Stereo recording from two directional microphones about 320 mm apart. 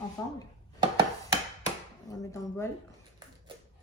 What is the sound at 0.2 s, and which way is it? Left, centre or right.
Speech, centre.